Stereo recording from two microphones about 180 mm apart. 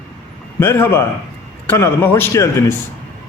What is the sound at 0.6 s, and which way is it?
A man's voice, 15° left (ahead or behind).